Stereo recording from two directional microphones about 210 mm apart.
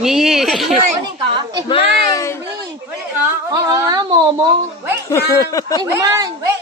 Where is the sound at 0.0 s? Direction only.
Centre (ahead or behind).